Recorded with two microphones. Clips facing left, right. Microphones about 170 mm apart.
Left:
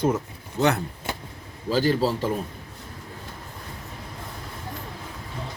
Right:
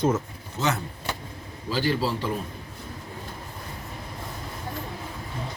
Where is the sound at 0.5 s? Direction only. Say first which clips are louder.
Left 5 dB; 60° left (ahead or behind).